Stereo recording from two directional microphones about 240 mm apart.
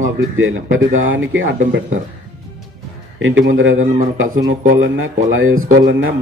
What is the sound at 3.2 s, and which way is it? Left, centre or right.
Speech, right.